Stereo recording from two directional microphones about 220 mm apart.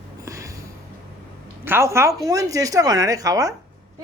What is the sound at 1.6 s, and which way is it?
Speech, 10° right (ahead or behind).